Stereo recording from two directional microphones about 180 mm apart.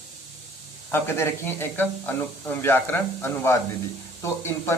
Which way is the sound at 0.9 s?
10° left (ahead or behind).